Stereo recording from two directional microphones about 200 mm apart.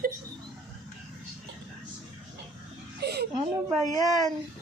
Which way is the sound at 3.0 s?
55° right (ahead or behind).